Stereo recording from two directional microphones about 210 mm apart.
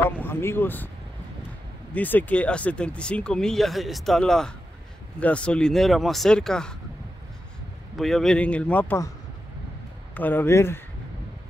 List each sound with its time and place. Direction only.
0.0 s speech: 10° left (ahead or behind)
2.0 s speech: 10° left (ahead or behind)
7.9 s speech: centre (ahead or behind)
10.1 s speech: 10° left (ahead or behind)